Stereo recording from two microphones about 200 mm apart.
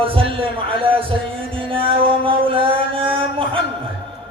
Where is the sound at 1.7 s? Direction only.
25° right (ahead or behind).